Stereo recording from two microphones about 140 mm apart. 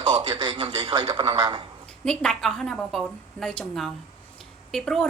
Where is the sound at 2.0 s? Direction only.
5° left (ahead or behind).